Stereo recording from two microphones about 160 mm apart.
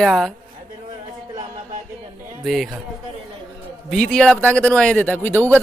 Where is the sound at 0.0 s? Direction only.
Centre (ahead or behind).